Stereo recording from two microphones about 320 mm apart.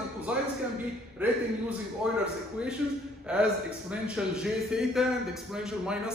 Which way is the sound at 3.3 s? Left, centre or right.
Centre.